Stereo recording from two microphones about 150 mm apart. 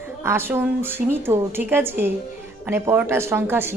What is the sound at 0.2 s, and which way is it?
A woman's voice, 15° right (ahead or behind).